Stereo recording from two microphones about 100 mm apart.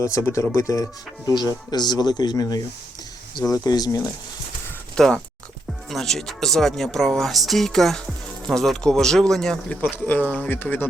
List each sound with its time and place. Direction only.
0.0 s speech: 30° left (ahead or behind)
1.3 s speech: 45° left (ahead or behind)
4.9 s speech: 5° left (ahead or behind)
10.1 s speech: 15° left (ahead or behind)